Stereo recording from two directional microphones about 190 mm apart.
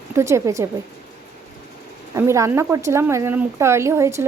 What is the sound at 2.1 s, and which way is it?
A woman's voice, 15° right (ahead or behind).